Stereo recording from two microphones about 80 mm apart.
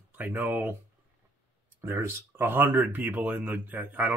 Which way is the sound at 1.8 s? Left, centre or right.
Right.